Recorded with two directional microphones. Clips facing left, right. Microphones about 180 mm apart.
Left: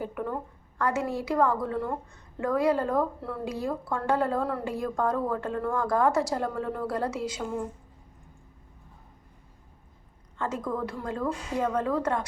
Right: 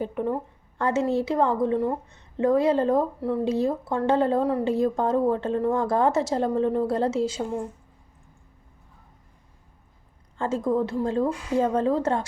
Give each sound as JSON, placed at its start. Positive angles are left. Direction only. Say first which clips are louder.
{"t": 0.0, "sound": "a woman's voice", "louder": "right 5 dB", "side_deg": -25}
{"t": 10.3, "sound": "a woman's voice", "louder": "right 7 dB", "side_deg": -30}